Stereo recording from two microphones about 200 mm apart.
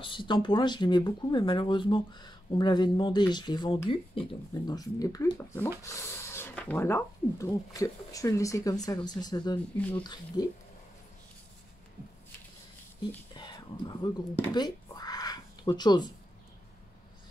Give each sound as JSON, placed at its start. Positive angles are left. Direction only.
{"t": 0.0, "sound": "speech", "side_deg": 25}
{"t": 9.8, "sound": "speech", "side_deg": 5}
{"t": 10.0, "sound": "speech", "side_deg": 20}
{"t": 13.3, "sound": "speech", "side_deg": 20}
{"t": 14.5, "sound": "a sound", "side_deg": 20}